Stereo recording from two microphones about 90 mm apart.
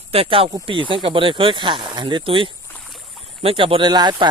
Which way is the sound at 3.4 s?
90° right.